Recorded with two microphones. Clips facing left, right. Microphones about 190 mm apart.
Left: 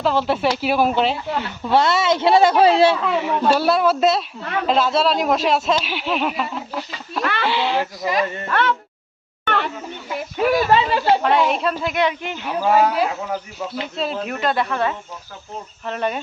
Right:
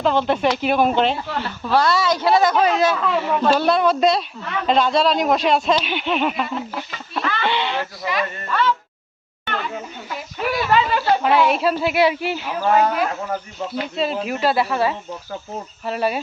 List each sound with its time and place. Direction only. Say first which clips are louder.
0.0 s speech: right 1 dB; 5° left (ahead or behind)
1.6 s speech: left 1 dB; 25° left (ahead or behind)
3.0 s speech: even; 10° left (ahead or behind)
7.8 s speech: left 3 dB; 45° left (ahead or behind)
8.4 s speech: right 3 dB; 65° left (ahead or behind)
9.4 s a sound: left 5 dB; 60° left (ahead or behind)
10.2 s a sound: left 6 dB; 50° left (ahead or behind)
10.7 s speech: left 1 dB; 30° left (ahead or behind)
11.2 s speech: right 1 dB; 5° right (ahead or behind)
12.5 s speech: left 2 dB; 5° left (ahead or behind)